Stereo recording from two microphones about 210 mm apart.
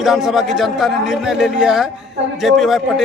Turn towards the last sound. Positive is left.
turn(degrees=0)  # may be behind; listen again after turning